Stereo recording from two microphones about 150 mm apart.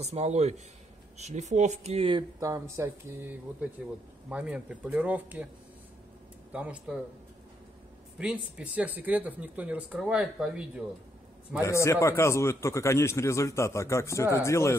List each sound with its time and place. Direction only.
0.0 s speech: 45° right (ahead or behind)
2.4 s speech: 20° right (ahead or behind)
3.8 s speech: 5° right (ahead or behind)
6.5 s speech: 10° right (ahead or behind)
8.2 s speech: 5° right (ahead or behind)
11.6 s a man's voice: 20° left (ahead or behind)